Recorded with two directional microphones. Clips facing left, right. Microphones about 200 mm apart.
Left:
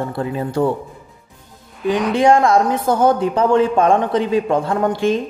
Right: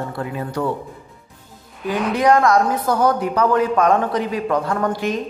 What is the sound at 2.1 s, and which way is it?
Speech, 25° left (ahead or behind).